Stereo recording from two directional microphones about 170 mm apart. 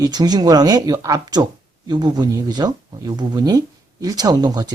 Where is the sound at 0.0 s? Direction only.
25° right (ahead or behind).